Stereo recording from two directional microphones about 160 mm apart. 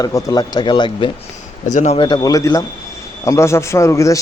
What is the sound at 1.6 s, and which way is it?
Speech, 45° left (ahead or behind).